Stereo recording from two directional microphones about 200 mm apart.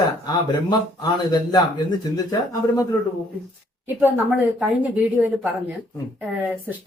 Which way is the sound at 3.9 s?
10° right (ahead or behind).